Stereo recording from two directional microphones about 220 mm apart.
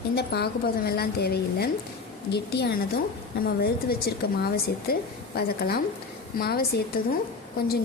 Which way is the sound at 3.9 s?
45° left (ahead or behind).